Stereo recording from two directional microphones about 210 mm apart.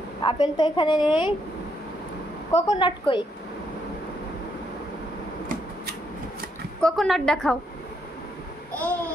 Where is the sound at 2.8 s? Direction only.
25° left (ahead or behind).